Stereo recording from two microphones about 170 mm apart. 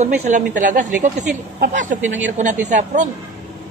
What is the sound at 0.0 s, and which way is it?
Speech, 45° right (ahead or behind).